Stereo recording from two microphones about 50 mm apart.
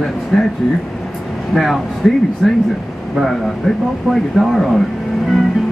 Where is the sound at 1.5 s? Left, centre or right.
Centre.